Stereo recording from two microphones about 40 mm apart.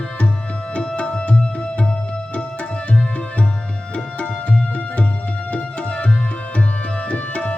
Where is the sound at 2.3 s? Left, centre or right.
Left.